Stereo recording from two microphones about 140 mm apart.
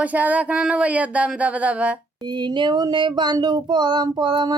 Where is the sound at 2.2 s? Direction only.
30° right (ahead or behind).